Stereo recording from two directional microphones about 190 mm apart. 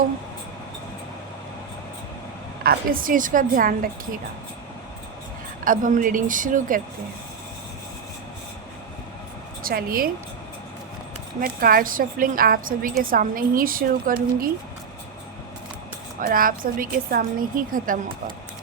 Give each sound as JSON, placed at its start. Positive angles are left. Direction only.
{"t": 2.6, "sound": "a woman's voice", "side_deg": -45}
{"t": 5.6, "sound": "a woman's voice", "side_deg": -45}
{"t": 9.6, "sound": "a woman's voice", "side_deg": -50}
{"t": 11.3, "sound": "a woman's voice", "side_deg": -50}
{"t": 16.2, "sound": "a woman's voice", "side_deg": -45}